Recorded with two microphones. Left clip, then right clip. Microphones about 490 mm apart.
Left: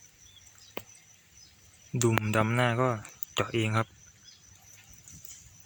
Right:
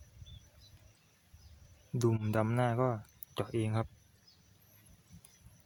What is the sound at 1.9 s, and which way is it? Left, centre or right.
Speech, right.